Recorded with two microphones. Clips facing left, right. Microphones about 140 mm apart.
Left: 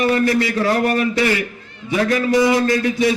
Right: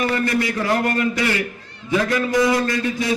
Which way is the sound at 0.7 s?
20° left (ahead or behind).